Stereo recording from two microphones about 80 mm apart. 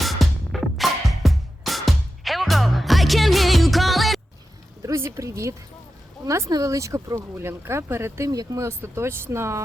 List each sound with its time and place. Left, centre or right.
0.0 s music: centre
4.8 s speech: right
8.3 s speech: right